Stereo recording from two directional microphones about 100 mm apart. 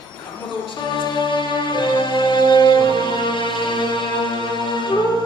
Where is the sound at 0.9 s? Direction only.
55° left (ahead or behind).